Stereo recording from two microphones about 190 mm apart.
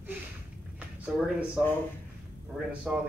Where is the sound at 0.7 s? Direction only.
5° right (ahead or behind).